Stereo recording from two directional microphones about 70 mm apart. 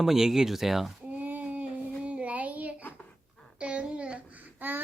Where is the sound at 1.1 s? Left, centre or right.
Right.